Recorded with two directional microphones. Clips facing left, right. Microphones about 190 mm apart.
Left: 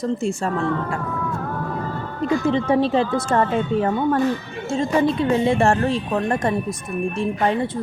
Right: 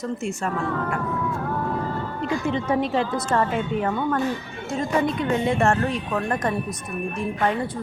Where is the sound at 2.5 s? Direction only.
30° left (ahead or behind).